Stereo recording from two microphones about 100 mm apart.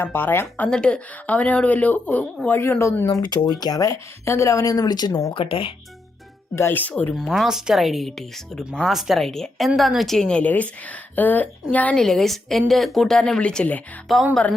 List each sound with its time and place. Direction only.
0.0 s speech: 20° left (ahead or behind)
0.7 s speech: 10° left (ahead or behind); by 3.1 s 25° left (ahead or behind)
3.1 s speech: 40° left (ahead or behind)
5.3 s speech: 60° left (ahead or behind)
6.6 s speech: 20° left (ahead or behind)
7.1 s speech: centre (ahead or behind)
11.9 s speech: 5° left (ahead or behind)
14.1 s speech: centre (ahead or behind)